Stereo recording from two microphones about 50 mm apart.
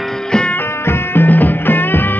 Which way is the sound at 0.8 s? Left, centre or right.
Left.